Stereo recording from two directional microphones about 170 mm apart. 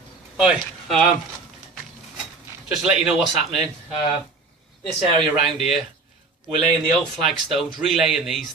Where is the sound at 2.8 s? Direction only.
5° right (ahead or behind).